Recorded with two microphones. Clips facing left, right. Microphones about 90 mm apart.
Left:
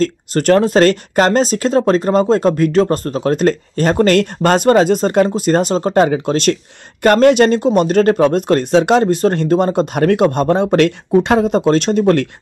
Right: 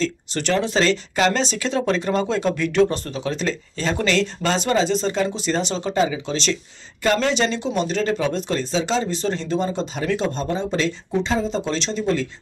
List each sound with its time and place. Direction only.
0.0 s speech: 50° left (ahead or behind)